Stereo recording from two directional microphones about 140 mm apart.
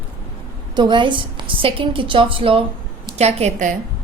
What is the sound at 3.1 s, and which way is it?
Speech, 50° right (ahead or behind).